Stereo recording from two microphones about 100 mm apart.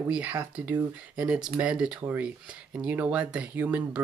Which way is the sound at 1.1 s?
10° right (ahead or behind).